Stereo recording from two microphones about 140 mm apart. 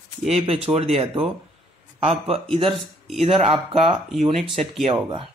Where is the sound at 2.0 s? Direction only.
45° right (ahead or behind).